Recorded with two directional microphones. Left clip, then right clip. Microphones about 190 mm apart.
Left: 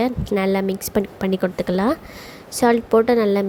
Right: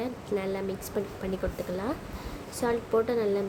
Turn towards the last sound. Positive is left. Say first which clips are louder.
# left 10 dB
turn(degrees=45)  # may be behind; listen again after turning